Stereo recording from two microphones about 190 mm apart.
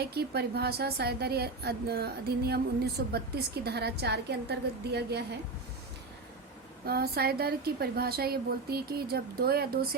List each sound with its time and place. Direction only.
0.0 s a woman's voice: 60° right (ahead or behind)
6.8 s a woman's voice: 55° right (ahead or behind)